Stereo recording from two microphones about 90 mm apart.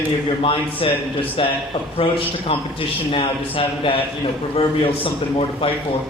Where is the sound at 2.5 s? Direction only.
90° left.